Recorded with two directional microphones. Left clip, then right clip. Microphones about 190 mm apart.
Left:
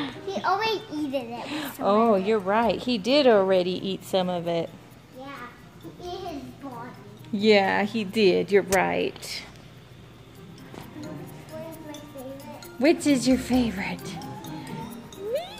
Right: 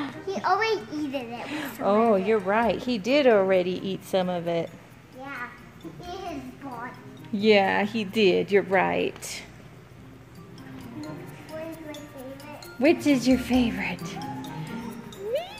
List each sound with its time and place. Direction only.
0.5 s a child's voice: 55° left (ahead or behind)
1.4 s speech: 5° right (ahead or behind)
7.3 s speech: centre (ahead or behind)
12.8 s speech: 5° right (ahead or behind)
15.3 s a sound: centre (ahead or behind)